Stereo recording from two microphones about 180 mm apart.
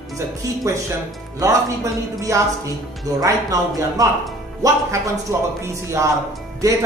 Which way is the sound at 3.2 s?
20° right (ahead or behind).